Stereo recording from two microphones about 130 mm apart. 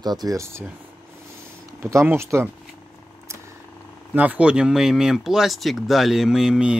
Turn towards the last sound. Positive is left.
turn(degrees=-5)  # may be behind; listen again after turning